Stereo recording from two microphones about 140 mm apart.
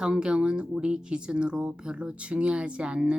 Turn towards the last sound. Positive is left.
turn(degrees=-5)  # may be behind; listen again after turning